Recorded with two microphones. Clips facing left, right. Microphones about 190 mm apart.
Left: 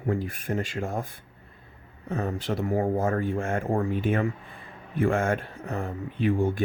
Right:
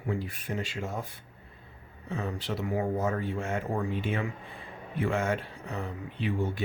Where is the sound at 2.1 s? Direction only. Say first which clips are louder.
Left 5 dB; 45° left (ahead or behind).